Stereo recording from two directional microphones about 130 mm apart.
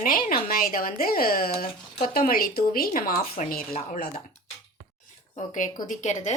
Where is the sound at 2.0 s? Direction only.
90° left.